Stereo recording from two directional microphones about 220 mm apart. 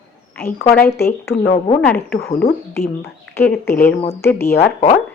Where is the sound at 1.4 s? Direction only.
30° left (ahead or behind).